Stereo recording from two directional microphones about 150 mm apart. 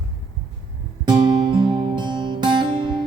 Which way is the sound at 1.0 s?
30° right (ahead or behind).